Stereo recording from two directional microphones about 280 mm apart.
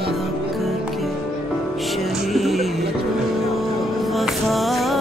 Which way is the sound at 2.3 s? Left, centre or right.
Centre.